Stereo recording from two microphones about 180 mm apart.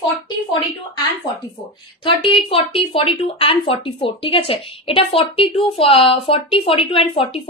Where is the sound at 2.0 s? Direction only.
30° left (ahead or behind).